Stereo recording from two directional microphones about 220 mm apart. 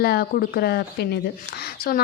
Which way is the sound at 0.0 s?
45° left (ahead or behind).